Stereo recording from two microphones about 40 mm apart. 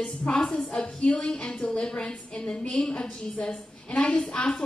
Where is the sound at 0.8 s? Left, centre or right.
Left.